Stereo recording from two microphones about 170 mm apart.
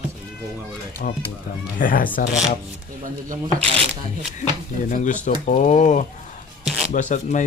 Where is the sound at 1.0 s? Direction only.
55° left (ahead or behind).